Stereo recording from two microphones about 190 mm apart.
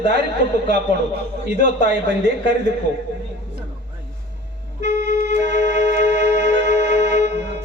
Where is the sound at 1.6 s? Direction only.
60° right (ahead or behind).